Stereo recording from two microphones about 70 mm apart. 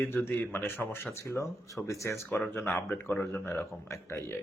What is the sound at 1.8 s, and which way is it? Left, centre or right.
Speech, left.